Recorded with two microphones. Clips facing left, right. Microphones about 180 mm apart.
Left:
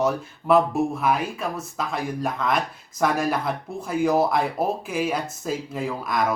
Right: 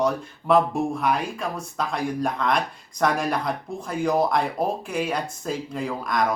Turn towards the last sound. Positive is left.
turn(degrees=5)  # may be behind; listen again after turning